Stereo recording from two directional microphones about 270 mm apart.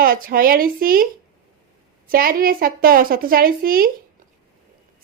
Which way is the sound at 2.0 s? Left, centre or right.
Right.